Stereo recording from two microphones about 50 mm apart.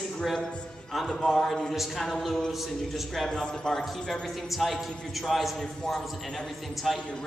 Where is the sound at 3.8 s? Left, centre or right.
Centre.